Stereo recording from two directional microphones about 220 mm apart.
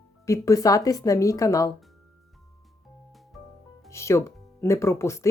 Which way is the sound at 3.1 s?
Centre (ahead or behind).